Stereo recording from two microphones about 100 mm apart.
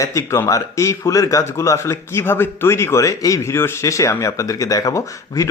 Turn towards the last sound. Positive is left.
turn(degrees=30)  # may be behind; listen again after turning